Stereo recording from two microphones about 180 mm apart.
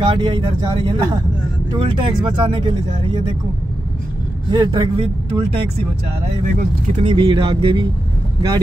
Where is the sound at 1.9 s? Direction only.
25° right (ahead or behind).